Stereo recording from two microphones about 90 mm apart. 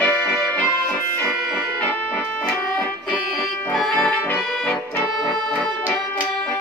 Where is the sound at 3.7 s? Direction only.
10° left (ahead or behind).